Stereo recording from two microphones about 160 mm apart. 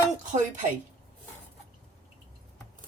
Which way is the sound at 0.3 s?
50° right (ahead or behind).